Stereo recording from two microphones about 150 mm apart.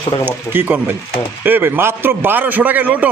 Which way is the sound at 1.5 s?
15° right (ahead or behind).